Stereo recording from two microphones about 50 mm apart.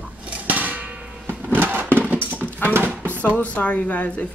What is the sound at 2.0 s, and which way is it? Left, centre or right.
Dog, right.